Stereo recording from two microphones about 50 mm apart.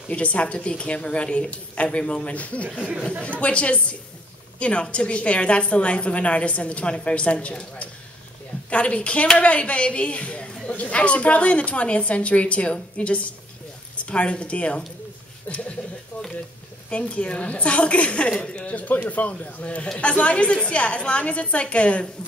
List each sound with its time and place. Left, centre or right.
0.1 s a woman's voice: left
15.4 s a sound: left
16.9 s a woman's voice: left